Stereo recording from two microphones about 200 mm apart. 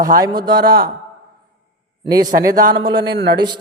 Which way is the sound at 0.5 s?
50° right (ahead or behind).